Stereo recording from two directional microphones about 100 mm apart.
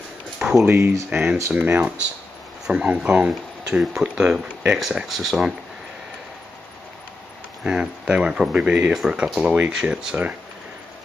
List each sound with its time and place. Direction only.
0.4 s a sound: 5° right (ahead or behind)
0.7 s speech: 25° right (ahead or behind); by 5.5 s centre (ahead or behind)
7.6 s speech: 10° right (ahead or behind)